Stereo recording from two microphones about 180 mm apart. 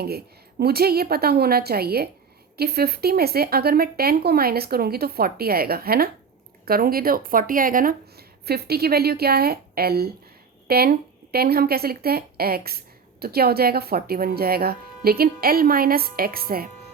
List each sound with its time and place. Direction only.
0.6 s speech: 60° right (ahead or behind)